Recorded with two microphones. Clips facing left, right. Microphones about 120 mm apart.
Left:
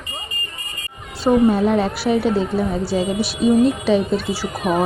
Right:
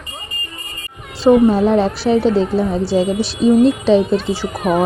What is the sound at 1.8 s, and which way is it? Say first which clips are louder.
Speech: right 4 dB; 30° right (ahead or behind).